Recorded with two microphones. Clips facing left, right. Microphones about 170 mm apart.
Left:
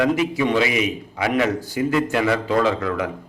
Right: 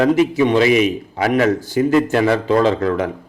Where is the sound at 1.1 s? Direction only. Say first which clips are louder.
Right 3 dB; 40° right (ahead or behind).